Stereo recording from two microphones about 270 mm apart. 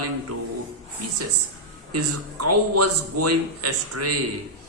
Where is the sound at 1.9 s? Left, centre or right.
Right.